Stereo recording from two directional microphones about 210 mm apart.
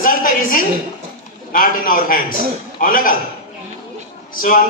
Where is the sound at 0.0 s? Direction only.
40° left (ahead or behind).